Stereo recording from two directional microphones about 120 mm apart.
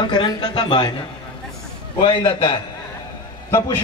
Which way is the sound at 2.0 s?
40° left (ahead or behind).